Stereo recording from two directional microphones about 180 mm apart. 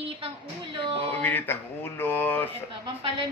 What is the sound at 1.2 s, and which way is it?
A man's voice, 10° left (ahead or behind).